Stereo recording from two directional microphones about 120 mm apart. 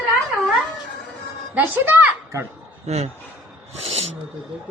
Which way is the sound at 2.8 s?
65° right (ahead or behind).